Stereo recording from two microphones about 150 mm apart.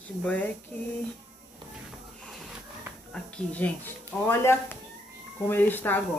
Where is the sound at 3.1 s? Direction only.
10° left (ahead or behind).